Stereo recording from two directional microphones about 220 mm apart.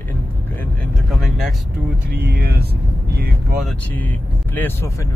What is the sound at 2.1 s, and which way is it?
Speech, 45° right (ahead or behind).